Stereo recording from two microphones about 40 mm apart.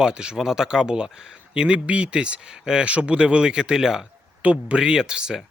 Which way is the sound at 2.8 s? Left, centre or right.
Right.